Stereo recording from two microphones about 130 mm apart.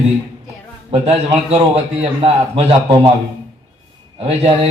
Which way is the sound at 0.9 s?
50° right (ahead or behind).